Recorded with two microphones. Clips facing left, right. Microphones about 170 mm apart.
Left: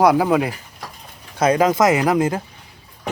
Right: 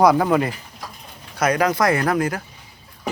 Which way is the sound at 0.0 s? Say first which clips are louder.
Left 1 dB; 5° left (ahead or behind).